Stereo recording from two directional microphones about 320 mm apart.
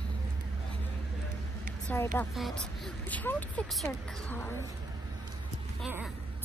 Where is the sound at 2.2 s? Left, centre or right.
Centre.